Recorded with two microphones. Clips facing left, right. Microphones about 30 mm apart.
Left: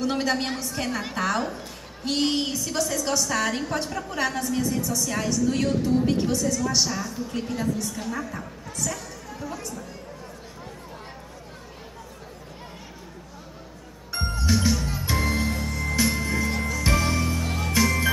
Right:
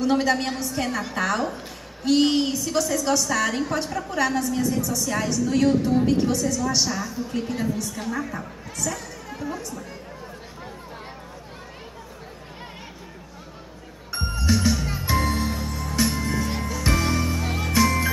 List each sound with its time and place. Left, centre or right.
0.0 s a woman's voice: centre
7.5 s a woman's voice: centre
9.3 s chatter: centre
9.6 s a woman's voice: centre
14.1 s music: centre